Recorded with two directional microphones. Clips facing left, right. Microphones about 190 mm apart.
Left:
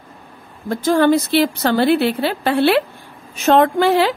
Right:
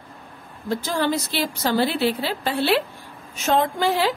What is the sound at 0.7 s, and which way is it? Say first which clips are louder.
A woman's voice: left 9 dB; 55° left (ahead or behind).